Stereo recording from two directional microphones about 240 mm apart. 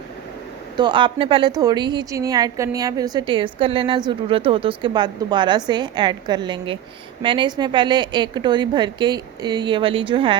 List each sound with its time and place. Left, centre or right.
0.8 s a woman's voice: centre